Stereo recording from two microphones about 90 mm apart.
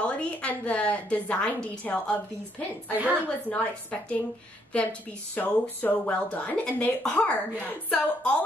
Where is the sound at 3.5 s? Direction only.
15° left (ahead or behind).